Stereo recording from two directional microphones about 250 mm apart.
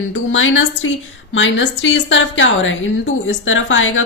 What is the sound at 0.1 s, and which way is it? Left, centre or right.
A woman's voice, left.